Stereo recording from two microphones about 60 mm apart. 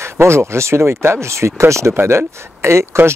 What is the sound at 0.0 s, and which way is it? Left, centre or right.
Speech, right.